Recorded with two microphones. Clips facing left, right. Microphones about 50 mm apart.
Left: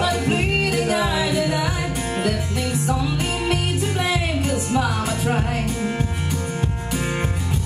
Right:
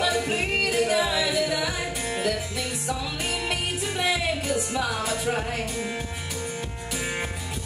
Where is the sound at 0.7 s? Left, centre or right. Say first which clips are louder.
Even; left.